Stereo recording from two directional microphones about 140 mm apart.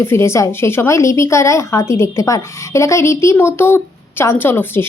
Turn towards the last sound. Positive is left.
turn(degrees=15)  # may be behind; listen again after turning